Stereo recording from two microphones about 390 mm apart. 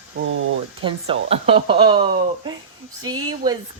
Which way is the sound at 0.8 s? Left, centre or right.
Centre.